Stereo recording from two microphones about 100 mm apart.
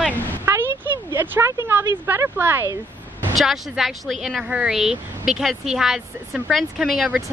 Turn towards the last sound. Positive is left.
turn(degrees=-10)  # may be behind; listen again after turning